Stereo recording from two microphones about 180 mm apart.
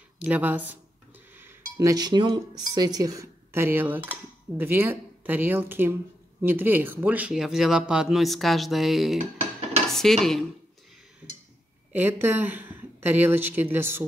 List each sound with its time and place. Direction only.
0.2 s speech: 10° right (ahead or behind)
11.9 s speech: 10° right (ahead or behind)